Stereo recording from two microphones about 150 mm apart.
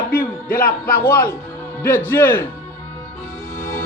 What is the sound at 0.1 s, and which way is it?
Music, 70° left (ahead or behind).